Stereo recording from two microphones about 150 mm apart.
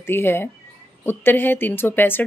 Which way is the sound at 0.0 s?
15° left (ahead or behind).